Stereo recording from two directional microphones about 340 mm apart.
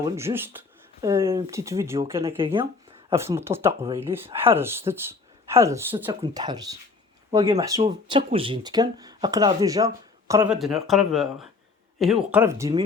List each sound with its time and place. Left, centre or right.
0.0 s speech: centre